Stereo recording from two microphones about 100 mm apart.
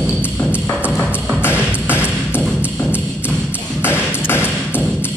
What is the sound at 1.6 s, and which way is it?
Music, 15° right (ahead or behind).